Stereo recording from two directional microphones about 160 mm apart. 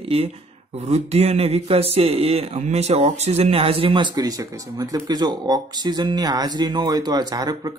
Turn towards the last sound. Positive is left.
turn(degrees=-25)  # may be behind; listen again after turning